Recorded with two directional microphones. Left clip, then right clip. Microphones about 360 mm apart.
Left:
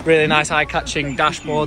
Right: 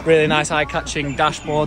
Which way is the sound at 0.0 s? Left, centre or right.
Centre.